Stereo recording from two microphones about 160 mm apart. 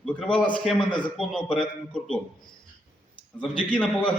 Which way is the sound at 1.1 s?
5° left (ahead or behind).